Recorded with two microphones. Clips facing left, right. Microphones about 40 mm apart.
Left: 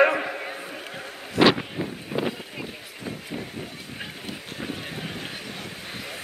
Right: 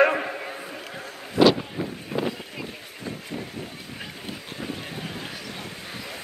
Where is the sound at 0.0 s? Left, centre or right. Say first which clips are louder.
Even; centre.